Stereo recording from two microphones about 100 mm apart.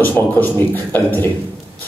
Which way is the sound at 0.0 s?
20° left (ahead or behind).